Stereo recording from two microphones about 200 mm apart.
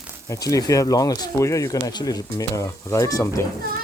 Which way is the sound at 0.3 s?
15° left (ahead or behind).